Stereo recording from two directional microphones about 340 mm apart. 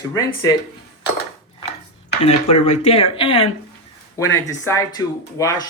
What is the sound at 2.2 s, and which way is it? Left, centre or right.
Speech, centre.